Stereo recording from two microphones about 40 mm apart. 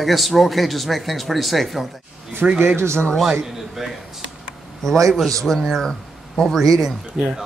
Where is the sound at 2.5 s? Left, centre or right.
Right.